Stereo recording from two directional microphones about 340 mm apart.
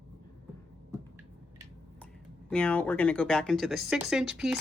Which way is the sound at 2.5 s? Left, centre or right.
Centre.